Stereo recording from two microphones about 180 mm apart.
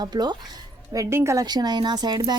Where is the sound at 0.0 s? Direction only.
25° right (ahead or behind).